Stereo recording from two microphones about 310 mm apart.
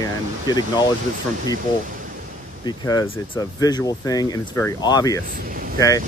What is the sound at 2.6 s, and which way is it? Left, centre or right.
Speech, centre.